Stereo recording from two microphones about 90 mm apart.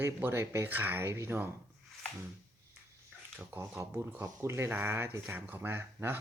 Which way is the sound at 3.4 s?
25° right (ahead or behind).